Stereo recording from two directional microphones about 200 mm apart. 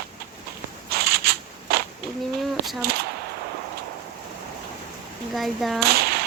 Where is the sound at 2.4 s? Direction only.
Centre (ahead or behind).